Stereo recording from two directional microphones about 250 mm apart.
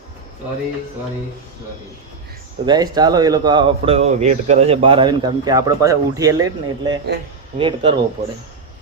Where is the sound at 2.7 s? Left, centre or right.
Centre.